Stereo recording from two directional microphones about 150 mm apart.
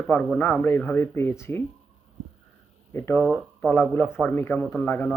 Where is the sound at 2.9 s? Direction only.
15° left (ahead or behind).